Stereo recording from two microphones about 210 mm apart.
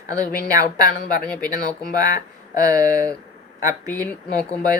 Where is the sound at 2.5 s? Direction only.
15° right (ahead or behind).